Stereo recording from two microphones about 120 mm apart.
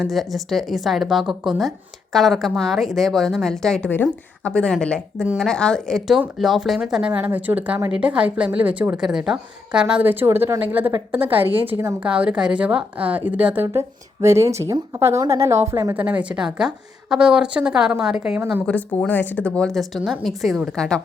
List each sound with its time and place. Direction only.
0.0 s a woman's voice: centre (ahead or behind); by 16.0 s 25° right (ahead or behind)
16.0 s a woman's voice: 10° right (ahead or behind)
18.6 s a woman's voice: 10° left (ahead or behind)